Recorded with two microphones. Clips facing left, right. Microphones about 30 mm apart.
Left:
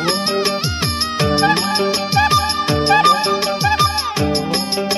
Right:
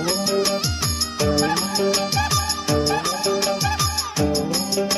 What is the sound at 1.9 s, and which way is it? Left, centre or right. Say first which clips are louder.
Music: left 2 dB; centre.